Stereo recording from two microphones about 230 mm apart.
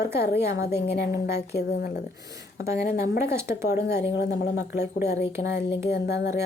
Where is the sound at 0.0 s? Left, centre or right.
Left.